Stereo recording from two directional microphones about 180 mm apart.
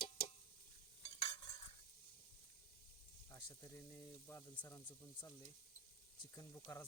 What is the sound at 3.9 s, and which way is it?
Sizzle, 15° left (ahead or behind).